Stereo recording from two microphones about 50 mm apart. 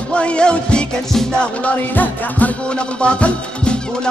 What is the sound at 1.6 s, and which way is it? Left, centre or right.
Music, left.